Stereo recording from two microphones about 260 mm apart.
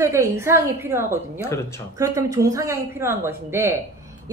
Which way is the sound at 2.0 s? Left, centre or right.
Centre.